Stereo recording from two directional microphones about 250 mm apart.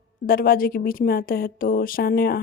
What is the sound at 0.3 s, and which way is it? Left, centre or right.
A woman's voice, left.